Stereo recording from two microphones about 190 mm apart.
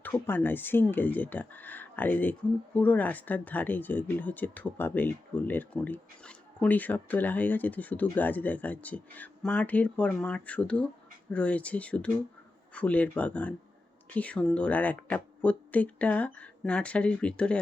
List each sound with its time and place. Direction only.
0.0 s speech: 10° left (ahead or behind)